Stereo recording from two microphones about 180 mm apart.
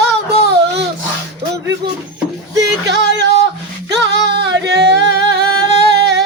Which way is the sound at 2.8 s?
75° right (ahead or behind).